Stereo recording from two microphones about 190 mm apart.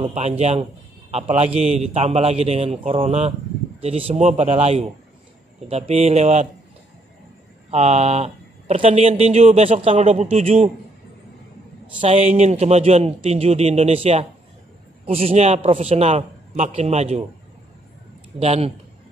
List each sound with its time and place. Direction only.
0.0 s speech: 35° right (ahead or behind)
7.7 s speech: 35° right (ahead or behind)
12.0 s speech: 35° right (ahead or behind)
18.4 s speech: 35° right (ahead or behind)